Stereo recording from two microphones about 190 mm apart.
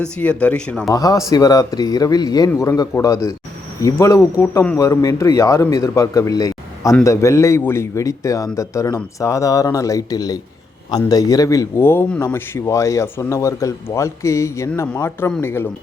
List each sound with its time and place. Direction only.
0.0 s a man's voice: 5° left (ahead or behind)
0.9 s a man's voice: 20° left (ahead or behind)